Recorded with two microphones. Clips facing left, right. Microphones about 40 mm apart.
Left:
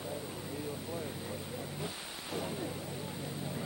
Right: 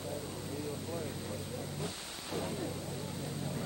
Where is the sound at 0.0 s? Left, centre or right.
Centre.